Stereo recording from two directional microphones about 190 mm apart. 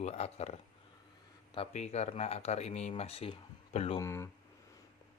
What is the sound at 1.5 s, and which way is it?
Speech, 35° left (ahead or behind).